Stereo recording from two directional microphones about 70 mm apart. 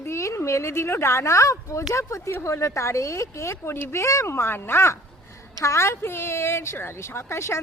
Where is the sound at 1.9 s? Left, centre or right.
Left.